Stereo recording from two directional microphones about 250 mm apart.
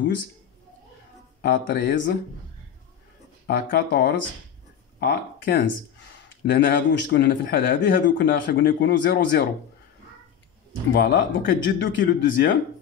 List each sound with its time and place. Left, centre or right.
1.4 s speech: left
3.4 s speech: left
10.9 s speech: left